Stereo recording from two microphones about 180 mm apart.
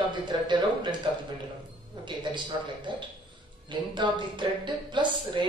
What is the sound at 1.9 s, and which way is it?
A woman's voice, 25° right (ahead or behind).